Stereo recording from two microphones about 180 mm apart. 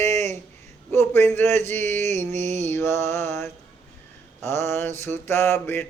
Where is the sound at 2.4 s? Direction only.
40° right (ahead or behind).